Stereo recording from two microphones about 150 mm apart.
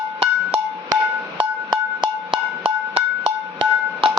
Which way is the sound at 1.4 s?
30° right (ahead or behind).